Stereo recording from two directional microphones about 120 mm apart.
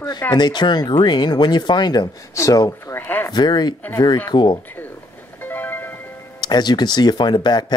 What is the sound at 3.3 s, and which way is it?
Speech, 35° left (ahead or behind).